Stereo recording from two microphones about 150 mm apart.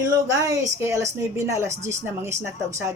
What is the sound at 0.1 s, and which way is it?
Speech, 25° right (ahead or behind).